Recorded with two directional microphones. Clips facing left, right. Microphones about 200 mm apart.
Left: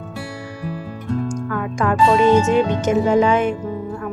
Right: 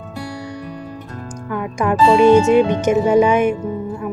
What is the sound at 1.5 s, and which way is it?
Speech, 15° right (ahead or behind).